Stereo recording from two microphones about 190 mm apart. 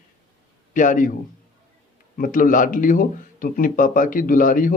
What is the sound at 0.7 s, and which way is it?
Speech, 45° left (ahead or behind).